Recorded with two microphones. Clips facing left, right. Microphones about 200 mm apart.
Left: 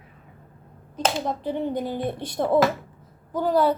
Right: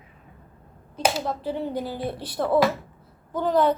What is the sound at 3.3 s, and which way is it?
Speech, 10° left (ahead or behind).